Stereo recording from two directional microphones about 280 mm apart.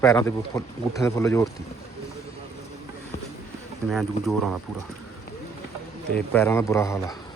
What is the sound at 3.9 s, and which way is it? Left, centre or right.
Speech, centre.